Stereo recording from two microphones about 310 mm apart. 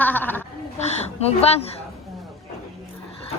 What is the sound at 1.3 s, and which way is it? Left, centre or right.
Speech, centre.